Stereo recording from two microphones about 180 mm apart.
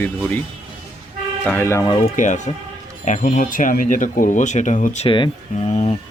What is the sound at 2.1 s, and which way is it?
Speech, 45° left (ahead or behind).